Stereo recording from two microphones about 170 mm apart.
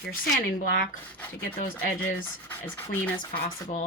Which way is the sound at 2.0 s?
10° left (ahead or behind).